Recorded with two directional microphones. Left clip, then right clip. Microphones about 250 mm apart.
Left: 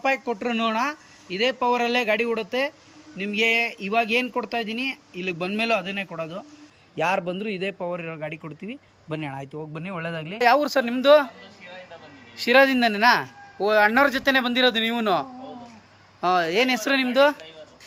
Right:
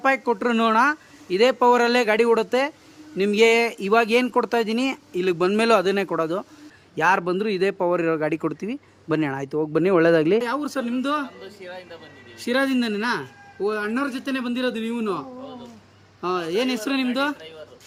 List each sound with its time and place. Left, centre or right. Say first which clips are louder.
0.0 s speech: right 4 dB; centre
10.4 s speech: left 7 dB; centre
12.4 s speech: left 6 dB; centre
16.2 s speech: left 3 dB; centre